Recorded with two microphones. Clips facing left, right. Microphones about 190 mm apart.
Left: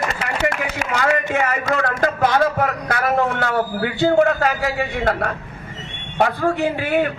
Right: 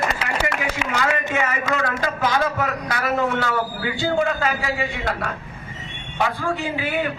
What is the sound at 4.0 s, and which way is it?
A man's voice, 60° left (ahead or behind).